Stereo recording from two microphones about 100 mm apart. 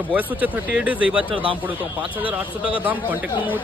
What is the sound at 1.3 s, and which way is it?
Speech, 60° right (ahead or behind).